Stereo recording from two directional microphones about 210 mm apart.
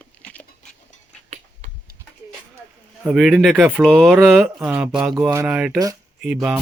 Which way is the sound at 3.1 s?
5° right (ahead or behind).